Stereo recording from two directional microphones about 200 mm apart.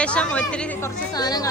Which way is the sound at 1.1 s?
20° left (ahead or behind).